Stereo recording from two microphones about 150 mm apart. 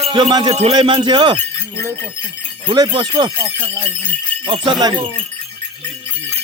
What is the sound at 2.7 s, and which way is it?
Speech, 30° right (ahead or behind).